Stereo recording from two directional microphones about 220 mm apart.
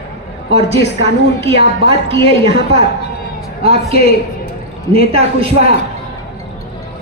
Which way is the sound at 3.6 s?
25° right (ahead or behind).